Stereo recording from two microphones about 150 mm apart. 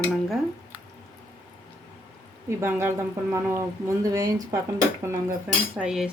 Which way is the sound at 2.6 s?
15° right (ahead or behind).